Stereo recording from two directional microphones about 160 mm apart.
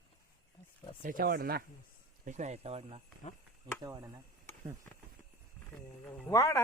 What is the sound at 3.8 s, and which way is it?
Speech, 25° right (ahead or behind).